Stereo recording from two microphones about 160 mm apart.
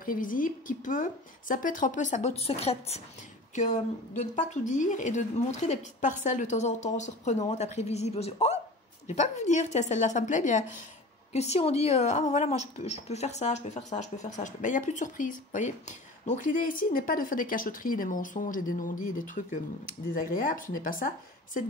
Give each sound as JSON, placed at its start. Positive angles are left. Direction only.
{"t": 0.0, "sound": "a woman's voice", "side_deg": 60}
{"t": 3.5, "sound": "a woman's voice", "side_deg": 50}